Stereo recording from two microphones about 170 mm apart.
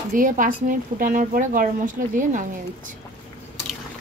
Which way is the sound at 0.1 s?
50° right (ahead or behind).